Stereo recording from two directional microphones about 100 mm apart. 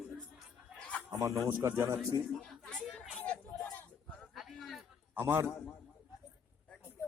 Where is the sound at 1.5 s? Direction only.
20° right (ahead or behind).